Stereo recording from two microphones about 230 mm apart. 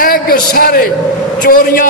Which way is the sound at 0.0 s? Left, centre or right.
Left.